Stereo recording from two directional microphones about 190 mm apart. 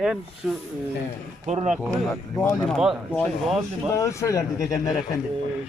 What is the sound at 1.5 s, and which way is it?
Speech, 35° right (ahead or behind).